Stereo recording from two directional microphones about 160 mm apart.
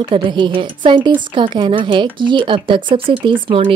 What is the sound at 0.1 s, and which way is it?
A woman's voice, 30° right (ahead or behind).